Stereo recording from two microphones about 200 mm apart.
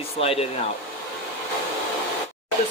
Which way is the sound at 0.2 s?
30° left (ahead or behind).